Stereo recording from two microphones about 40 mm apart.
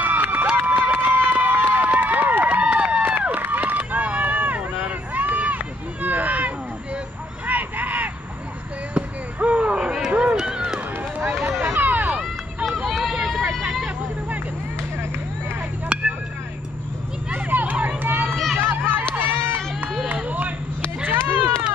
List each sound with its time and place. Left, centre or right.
0.0 s run: right
1.9 s run: right
7.4 s vehicle: right
8.9 s basketball bounce: right
9.8 s a sound: centre
11.6 s a sound: right
12.6 s run: centre
15.9 s vehicle: right
17.3 s a sound: right
17.8 s run: right
18.3 s run: centre
18.6 s run: right
20.1 s run: right
21.1 s run: right